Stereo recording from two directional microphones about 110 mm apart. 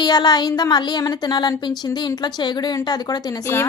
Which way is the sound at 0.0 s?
40° left (ahead or behind).